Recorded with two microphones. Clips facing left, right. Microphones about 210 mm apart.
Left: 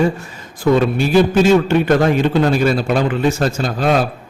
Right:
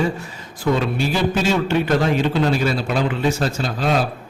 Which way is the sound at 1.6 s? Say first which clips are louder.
Left 5 dB; 50° left (ahead or behind).